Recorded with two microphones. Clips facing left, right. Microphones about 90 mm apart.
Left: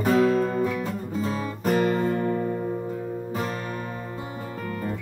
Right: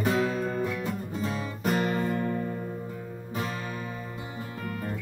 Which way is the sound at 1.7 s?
40° left (ahead or behind).